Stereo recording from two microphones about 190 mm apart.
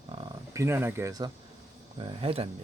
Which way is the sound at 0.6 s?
10° right (ahead or behind).